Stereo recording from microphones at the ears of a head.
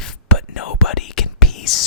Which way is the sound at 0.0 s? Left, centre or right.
Left.